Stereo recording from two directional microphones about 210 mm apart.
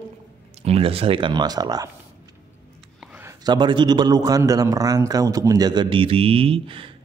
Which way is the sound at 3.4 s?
20° right (ahead or behind).